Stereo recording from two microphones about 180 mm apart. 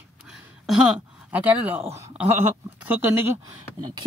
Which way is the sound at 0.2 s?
5° right (ahead or behind).